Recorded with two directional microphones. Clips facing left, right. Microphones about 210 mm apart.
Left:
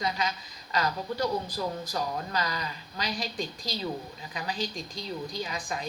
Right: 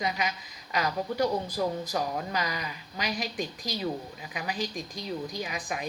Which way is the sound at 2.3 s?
15° right (ahead or behind).